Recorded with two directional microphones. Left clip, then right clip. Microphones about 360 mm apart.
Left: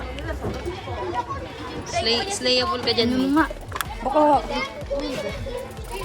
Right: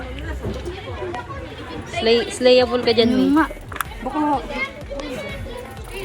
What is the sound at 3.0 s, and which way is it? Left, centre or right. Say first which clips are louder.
Speech: right 4 dB; centre.